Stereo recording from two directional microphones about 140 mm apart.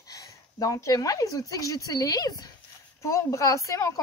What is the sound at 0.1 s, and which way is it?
Speech, 25° left (ahead or behind).